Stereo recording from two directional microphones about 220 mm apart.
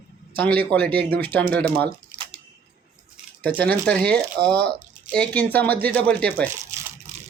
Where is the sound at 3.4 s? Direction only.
5° left (ahead or behind).